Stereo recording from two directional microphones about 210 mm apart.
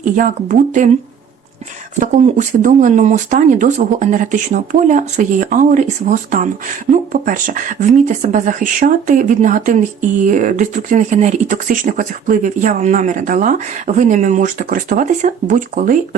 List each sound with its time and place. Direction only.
0.0 s speech: 35° right (ahead or behind)
2.0 s speech: 35° right (ahead or behind)